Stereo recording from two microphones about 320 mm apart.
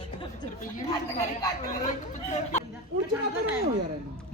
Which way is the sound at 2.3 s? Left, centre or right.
Left.